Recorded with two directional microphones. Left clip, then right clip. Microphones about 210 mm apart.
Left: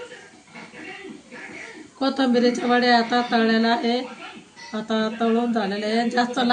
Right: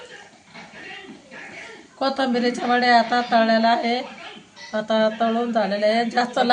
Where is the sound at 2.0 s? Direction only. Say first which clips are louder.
Left 1 dB; 35° right (ahead or behind).